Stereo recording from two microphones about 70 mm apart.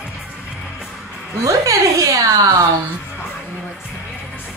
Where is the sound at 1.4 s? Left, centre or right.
Right.